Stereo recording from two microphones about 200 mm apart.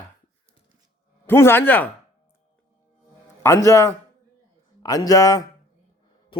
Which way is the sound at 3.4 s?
15° left (ahead or behind).